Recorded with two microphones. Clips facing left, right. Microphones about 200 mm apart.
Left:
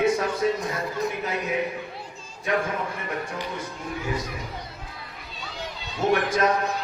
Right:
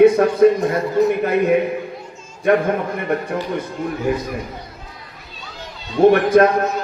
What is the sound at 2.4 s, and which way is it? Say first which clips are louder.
Speech: right 10 dB; 60° right (ahead or behind).